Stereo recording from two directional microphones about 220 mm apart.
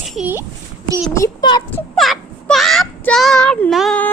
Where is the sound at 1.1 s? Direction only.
15° left (ahead or behind).